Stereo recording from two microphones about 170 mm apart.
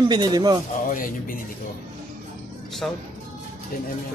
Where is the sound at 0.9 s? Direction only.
55° left (ahead or behind).